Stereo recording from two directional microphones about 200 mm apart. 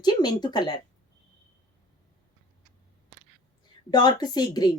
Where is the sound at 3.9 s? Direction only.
20° left (ahead or behind).